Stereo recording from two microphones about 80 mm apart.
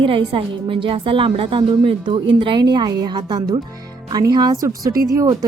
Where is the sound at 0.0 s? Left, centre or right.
Right.